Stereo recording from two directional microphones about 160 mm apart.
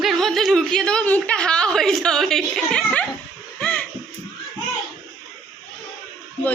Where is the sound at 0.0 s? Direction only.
Centre (ahead or behind).